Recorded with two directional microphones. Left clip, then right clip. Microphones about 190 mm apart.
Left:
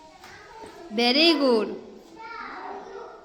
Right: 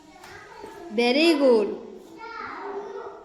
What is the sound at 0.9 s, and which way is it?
Speech, 20° left (ahead or behind).